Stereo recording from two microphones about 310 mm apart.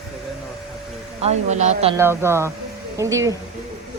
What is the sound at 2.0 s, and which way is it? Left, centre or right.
A woman's voice, centre.